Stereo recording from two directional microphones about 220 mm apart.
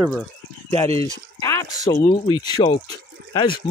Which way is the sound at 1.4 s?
15° left (ahead or behind).